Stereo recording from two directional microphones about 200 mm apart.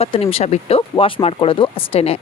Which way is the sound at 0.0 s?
30° left (ahead or behind).